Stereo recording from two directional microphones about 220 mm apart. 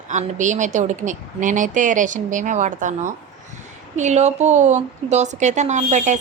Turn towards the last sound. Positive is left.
turn(degrees=-35)  # may be behind; listen again after turning